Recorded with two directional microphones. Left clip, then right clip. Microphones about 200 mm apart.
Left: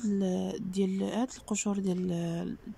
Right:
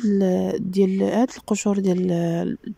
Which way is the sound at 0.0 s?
30° right (ahead or behind).